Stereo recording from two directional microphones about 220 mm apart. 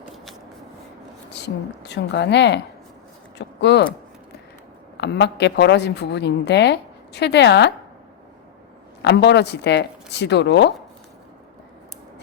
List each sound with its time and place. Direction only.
1.3 s a woman's voice: 50° left (ahead or behind)
4.9 s a woman's voice: 50° left (ahead or behind)
9.0 s a woman's voice: 50° left (ahead or behind)